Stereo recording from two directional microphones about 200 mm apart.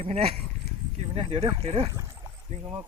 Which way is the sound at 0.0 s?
30° right (ahead or behind).